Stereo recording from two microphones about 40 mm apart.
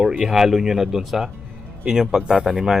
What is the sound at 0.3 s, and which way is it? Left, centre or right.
A man's voice, centre.